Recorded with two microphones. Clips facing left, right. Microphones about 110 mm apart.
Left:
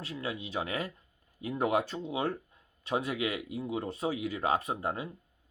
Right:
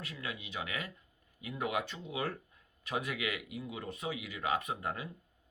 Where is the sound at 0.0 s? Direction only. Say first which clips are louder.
Left 6 dB; 30° left (ahead or behind).